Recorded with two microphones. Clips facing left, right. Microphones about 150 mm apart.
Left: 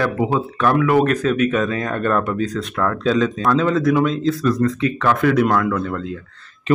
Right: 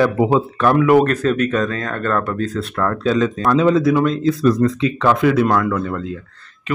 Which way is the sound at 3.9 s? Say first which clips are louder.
Right 1 dB; centre (ahead or behind).